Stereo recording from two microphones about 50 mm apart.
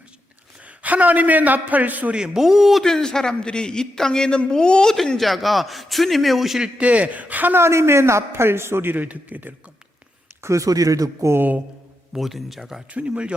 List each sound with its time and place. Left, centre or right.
0.8 s a man's voice: right
2.1 s speech: centre
2.8 s a man's voice: centre
5.1 s a man's voice: centre
6.6 s a man's voice: right
7.5 s speech: right
8.3 s speech: right
9.0 s a man's voice: right
10.4 s speech: right
11.3 s a man's voice: right
12.1 s a man's voice: centre
12.9 s a man's voice: right